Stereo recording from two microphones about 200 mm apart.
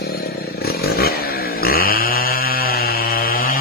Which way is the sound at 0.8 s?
50° left (ahead or behind).